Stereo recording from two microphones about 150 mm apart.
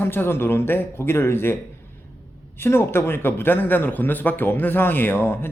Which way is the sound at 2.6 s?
15° left (ahead or behind).